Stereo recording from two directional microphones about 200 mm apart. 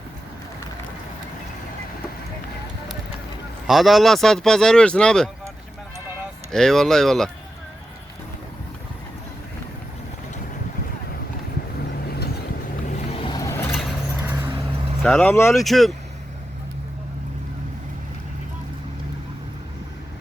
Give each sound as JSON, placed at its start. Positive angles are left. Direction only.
{"t": 3.7, "sound": "speech", "side_deg": 0}
{"t": 6.5, "sound": "speech", "side_deg": 5}
{"t": 13.1, "sound": "vehicle", "side_deg": 25}
{"t": 14.3, "sound": "vehicle", "side_deg": -10}
{"t": 15.0, "sound": "speech", "side_deg": 5}
{"t": 15.5, "sound": "speech", "side_deg": 0}